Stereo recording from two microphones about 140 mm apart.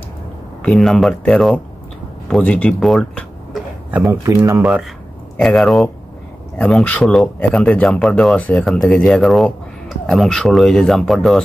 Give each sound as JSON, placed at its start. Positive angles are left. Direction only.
{"t": 0.6, "sound": "speech", "side_deg": 5}
{"t": 3.9, "sound": "speech", "side_deg": -15}
{"t": 5.4, "sound": "speech", "side_deg": 0}